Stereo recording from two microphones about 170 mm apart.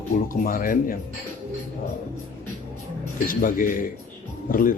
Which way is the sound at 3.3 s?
55° left (ahead or behind).